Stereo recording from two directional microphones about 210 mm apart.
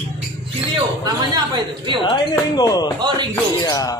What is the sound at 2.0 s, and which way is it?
Speech, 20° left (ahead or behind).